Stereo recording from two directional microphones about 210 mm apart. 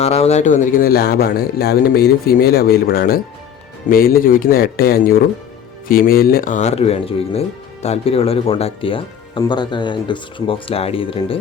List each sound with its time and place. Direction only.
0.0 s speech: 30° left (ahead or behind)